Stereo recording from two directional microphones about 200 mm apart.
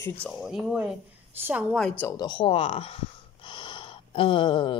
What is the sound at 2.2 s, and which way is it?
Speech, 25° left (ahead or behind).